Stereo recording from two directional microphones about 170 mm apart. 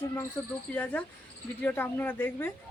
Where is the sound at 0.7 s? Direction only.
10° left (ahead or behind).